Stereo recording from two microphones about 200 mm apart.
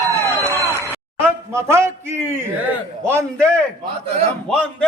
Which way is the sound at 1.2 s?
15° right (ahead or behind).